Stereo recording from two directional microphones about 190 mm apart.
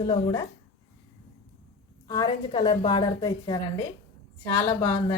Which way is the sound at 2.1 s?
20° left (ahead or behind).